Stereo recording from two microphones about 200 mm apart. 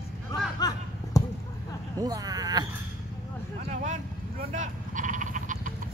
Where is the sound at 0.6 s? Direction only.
20° left (ahead or behind).